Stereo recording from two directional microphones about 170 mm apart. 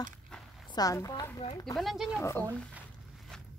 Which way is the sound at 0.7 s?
20° left (ahead or behind).